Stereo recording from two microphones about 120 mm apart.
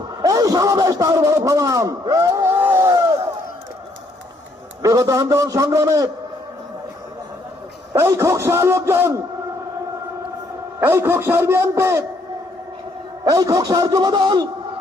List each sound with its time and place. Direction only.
0.2 s a man's voice: 30° right (ahead or behind)
2.7 s battle cry: 25° right (ahead or behind)
4.8 s a man's voice: 30° right (ahead or behind)
7.9 s a man's voice: 25° right (ahead or behind)
10.8 s a man's voice: 20° right (ahead or behind)
13.2 s a man's voice: 30° right (ahead or behind)